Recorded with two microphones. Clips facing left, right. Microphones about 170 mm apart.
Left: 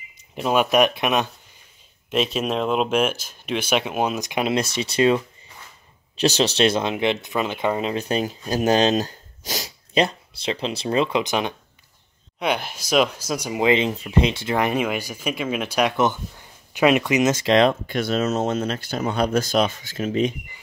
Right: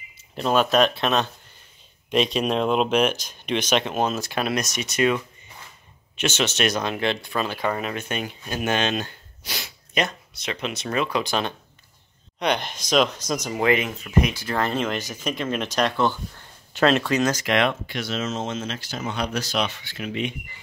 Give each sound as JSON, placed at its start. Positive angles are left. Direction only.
{"t": 0.4, "sound": "speech", "side_deg": 10}
{"t": 2.0, "sound": "speech", "side_deg": 5}
{"t": 4.6, "sound": "speech", "side_deg": 30}
{"t": 7.9, "sound": "speech", "side_deg": 35}
{"t": 12.4, "sound": "speech", "side_deg": 5}
{"t": 17.8, "sound": "speech", "side_deg": 50}